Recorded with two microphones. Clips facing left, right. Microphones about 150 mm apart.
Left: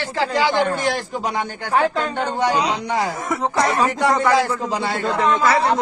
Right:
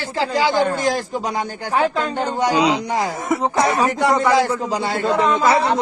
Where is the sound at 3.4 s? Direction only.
20° right (ahead or behind).